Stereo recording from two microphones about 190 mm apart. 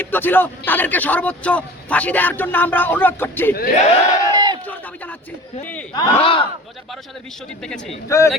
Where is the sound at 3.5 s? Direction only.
50° left (ahead or behind).